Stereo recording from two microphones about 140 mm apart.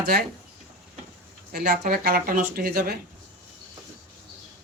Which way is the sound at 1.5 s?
90° right.